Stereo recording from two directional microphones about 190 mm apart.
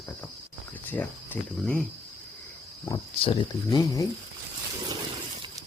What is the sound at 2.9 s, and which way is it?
Speech, 25° left (ahead or behind).